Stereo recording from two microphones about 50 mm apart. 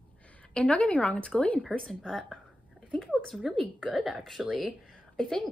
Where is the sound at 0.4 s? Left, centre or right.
Left.